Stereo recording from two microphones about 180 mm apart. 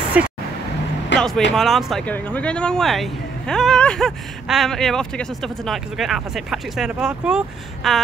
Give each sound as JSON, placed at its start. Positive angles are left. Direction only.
{"t": 0.2, "sound": "speech", "side_deg": -5}
{"t": 1.1, "sound": "vehicle", "side_deg": 90}
{"t": 1.5, "sound": "speech", "side_deg": 0}